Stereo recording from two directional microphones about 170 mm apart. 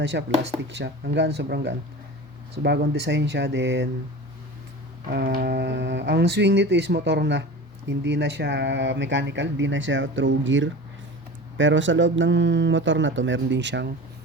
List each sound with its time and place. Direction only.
0.0 s speech: 90° right
5.0 s speech: 65° right (ahead or behind); by 13.9 s 90° right